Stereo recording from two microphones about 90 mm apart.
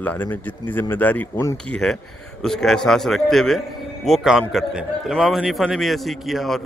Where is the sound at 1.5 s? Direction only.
5° left (ahead or behind).